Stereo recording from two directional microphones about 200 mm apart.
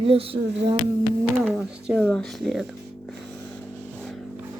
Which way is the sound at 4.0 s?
Centre (ahead or behind).